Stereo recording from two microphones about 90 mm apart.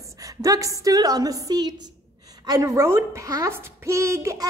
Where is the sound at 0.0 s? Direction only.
40° right (ahead or behind).